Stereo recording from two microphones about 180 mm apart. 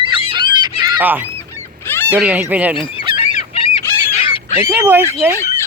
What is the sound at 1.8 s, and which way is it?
Goose, 10° left (ahead or behind).